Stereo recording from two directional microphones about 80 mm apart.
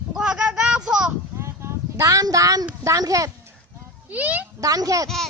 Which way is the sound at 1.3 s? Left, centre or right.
Right.